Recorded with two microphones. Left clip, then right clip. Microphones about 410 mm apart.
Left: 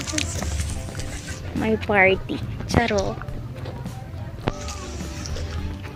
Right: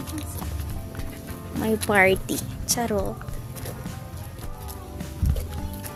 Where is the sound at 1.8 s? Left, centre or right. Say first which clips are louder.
Left 1 dB; right.